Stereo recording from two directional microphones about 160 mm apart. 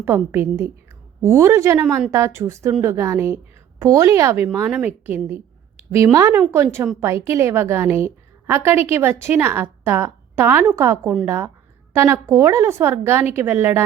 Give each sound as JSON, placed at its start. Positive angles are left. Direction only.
{"t": 0.0, "sound": "a woman's voice", "side_deg": -15}